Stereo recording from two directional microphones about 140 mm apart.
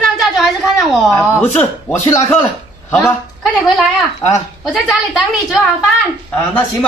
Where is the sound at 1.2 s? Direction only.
20° left (ahead or behind).